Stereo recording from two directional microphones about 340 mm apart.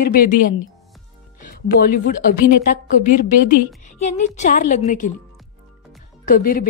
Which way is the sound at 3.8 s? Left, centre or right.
Left.